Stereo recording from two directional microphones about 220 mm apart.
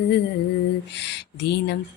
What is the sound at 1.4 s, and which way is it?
Mantra, 50° left (ahead or behind).